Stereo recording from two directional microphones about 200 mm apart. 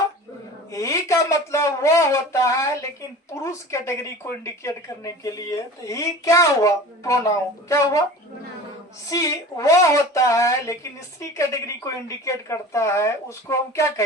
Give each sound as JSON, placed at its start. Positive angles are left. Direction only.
{"t": 0.7, "sound": "speech", "side_deg": 15}
{"t": 9.0, "sound": "speech", "side_deg": 15}